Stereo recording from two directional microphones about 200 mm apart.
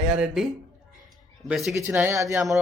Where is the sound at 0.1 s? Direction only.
5° right (ahead or behind).